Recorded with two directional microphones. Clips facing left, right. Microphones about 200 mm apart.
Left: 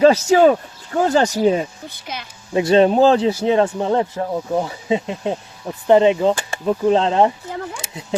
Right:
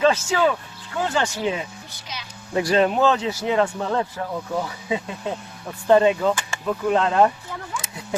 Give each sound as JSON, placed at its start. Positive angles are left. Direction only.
{"t": 0.0, "sound": "speech", "side_deg": 40}
{"t": 2.1, "sound": "a woman's voice", "side_deg": 55}
{"t": 2.5, "sound": "speech", "side_deg": 25}